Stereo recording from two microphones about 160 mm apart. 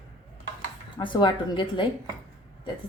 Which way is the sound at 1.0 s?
30° left (ahead or behind).